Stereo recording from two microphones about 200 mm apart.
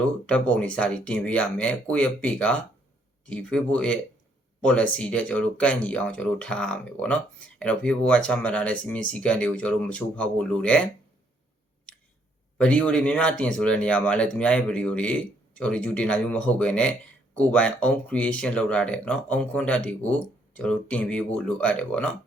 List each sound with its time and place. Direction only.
0.3 s speech: 5° left (ahead or behind)
12.5 s speech: 5° left (ahead or behind)